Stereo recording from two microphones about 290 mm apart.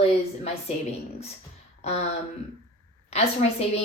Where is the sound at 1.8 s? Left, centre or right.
Left.